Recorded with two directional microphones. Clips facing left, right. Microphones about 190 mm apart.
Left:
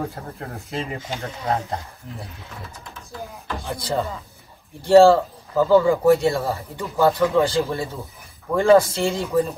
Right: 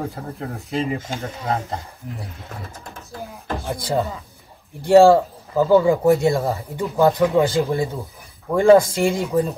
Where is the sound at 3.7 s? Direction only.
15° right (ahead or behind).